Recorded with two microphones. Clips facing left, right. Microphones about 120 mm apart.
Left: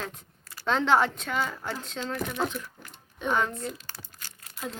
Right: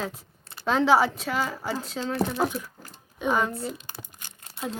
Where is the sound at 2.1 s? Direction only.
30° right (ahead or behind).